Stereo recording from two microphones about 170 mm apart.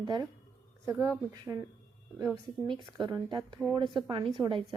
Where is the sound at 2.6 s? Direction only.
25° right (ahead or behind).